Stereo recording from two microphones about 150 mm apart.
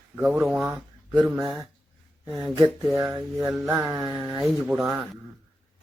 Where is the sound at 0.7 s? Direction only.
20° right (ahead or behind).